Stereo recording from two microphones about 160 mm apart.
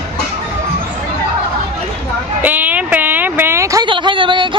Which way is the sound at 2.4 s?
10° right (ahead or behind).